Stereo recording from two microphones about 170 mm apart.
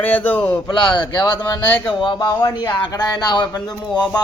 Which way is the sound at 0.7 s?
30° left (ahead or behind).